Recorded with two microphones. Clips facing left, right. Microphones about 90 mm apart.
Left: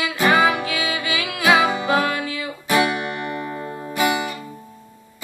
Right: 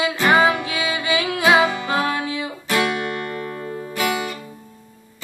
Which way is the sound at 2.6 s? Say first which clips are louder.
Left 2 dB; 15° left (ahead or behind).